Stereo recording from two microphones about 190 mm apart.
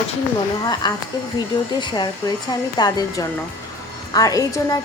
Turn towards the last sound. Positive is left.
turn(degrees=20)  # may be behind; listen again after turning